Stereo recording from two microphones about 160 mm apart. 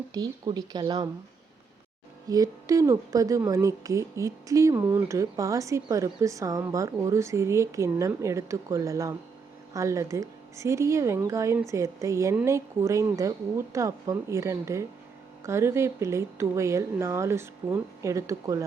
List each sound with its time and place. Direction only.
0.1 s a woman's voice: 25° right (ahead or behind)
2.2 s a woman's voice: 25° right (ahead or behind)